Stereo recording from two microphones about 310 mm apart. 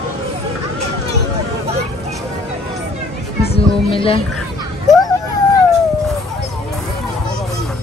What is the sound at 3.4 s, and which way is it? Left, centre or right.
Speech, centre.